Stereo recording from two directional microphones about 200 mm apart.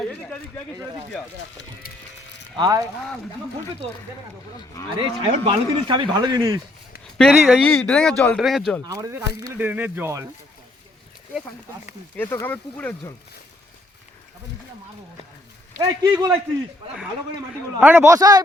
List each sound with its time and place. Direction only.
2.6 s speech: 15° right (ahead or behind)
4.9 s speech: 25° right (ahead or behind)
7.2 s speech: centre (ahead or behind)
8.9 s speech: 15° right (ahead or behind)
12.1 s speech: 10° left (ahead or behind)
15.8 s speech: 20° right (ahead or behind)
17.7 s speech: 10° right (ahead or behind)